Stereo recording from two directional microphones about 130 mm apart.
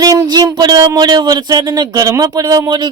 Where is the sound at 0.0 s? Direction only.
30° right (ahead or behind).